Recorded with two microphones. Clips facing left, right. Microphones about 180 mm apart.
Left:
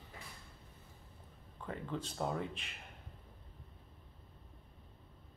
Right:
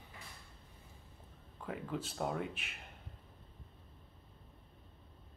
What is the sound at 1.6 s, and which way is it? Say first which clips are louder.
Speech: right 1 dB; 5° right (ahead or behind).